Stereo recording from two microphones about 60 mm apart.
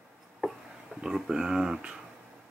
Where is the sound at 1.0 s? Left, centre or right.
Centre.